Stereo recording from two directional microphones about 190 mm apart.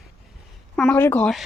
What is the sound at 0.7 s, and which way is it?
Speech, 10° left (ahead or behind).